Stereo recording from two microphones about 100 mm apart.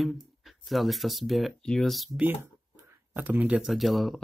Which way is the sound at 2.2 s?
15° right (ahead or behind).